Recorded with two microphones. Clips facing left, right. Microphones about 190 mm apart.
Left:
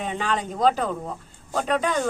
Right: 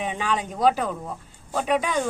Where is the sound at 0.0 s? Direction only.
10° right (ahead or behind).